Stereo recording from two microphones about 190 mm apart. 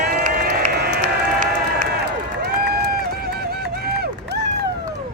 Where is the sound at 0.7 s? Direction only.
60° right (ahead or behind).